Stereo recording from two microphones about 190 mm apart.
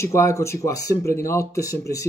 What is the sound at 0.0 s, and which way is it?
Speech, 15° left (ahead or behind).